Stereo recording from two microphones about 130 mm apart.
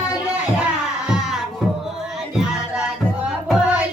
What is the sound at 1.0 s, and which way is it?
Music, 5° right (ahead or behind).